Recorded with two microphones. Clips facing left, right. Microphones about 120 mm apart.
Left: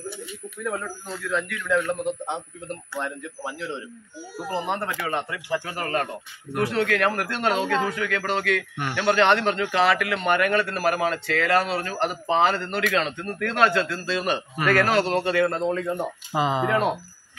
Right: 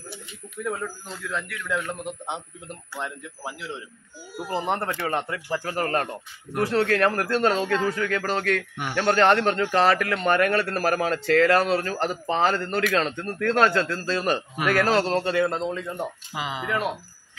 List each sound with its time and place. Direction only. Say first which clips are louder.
1.3 s a man's voice: left 5 dB; 5° right (ahead or behind)
4.6 s a man's voice: right 1 dB; 40° right (ahead or behind)
14.6 s a man's voice: left 2 dB; 10° right (ahead or behind)
14.9 s a man's voice: even; 35° right (ahead or behind)
15.3 s speech: left 2 dB; 20° right (ahead or behind)
16.3 s speech: left 6 dB; 35° left (ahead or behind)